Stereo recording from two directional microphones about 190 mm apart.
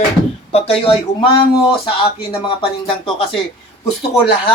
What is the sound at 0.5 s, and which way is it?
Speech, 30° left (ahead or behind).